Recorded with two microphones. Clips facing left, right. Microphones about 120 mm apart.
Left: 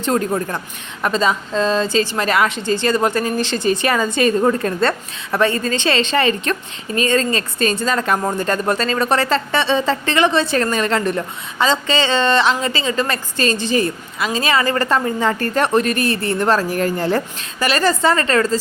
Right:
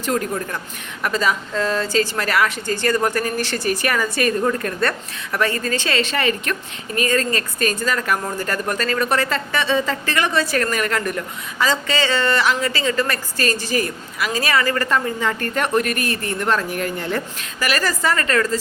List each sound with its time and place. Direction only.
0.0 s a woman's voice: 30° left (ahead or behind)